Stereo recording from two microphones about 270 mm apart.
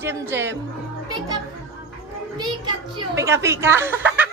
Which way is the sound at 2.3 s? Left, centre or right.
Centre.